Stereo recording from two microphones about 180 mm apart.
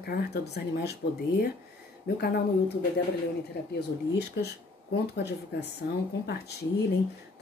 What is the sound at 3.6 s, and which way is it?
Speech, 65° left (ahead or behind).